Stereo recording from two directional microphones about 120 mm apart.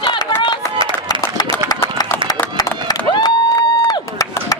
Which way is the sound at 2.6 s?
35° left (ahead or behind).